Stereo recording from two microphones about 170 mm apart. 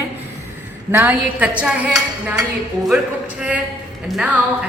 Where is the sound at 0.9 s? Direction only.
10° right (ahead or behind).